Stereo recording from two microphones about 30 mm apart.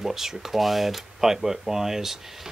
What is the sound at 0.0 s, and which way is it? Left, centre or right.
Speech, centre.